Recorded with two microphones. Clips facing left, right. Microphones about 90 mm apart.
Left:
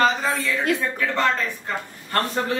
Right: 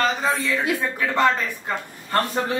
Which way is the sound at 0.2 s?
15° right (ahead or behind).